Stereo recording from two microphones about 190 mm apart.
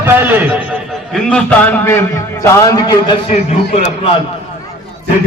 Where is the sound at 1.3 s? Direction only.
10° left (ahead or behind).